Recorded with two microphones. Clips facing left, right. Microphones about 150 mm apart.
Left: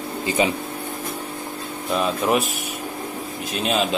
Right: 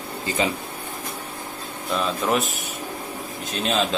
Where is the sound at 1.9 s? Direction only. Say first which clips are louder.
Left 2 dB; 5° left (ahead or behind).